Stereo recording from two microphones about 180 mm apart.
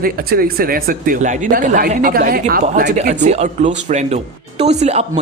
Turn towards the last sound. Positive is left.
turn(degrees=-35)  # may be behind; listen again after turning